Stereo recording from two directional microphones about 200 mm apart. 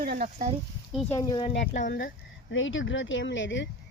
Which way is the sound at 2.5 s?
70° left (ahead or behind).